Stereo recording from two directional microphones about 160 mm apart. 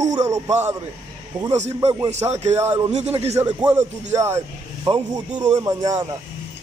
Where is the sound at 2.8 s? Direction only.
45° right (ahead or behind).